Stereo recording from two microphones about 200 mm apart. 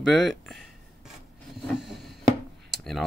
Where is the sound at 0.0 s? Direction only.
Centre (ahead or behind).